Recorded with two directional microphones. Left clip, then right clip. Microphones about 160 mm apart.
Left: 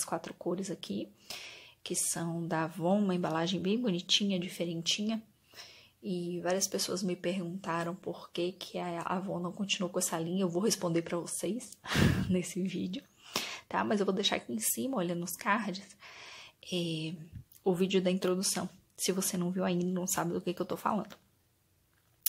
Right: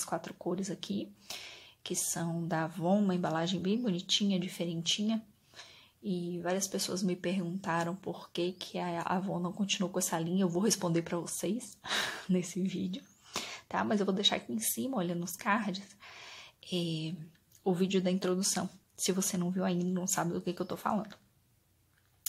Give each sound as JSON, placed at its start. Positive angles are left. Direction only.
{"t": 0.0, "sound": "speech", "side_deg": 10}